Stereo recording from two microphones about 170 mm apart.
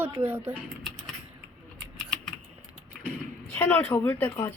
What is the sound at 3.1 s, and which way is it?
Speech, 10° left (ahead or behind).